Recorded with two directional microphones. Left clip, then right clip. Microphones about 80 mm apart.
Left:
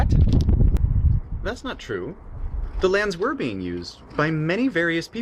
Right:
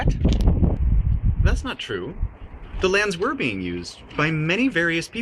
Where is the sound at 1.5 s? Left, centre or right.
Left.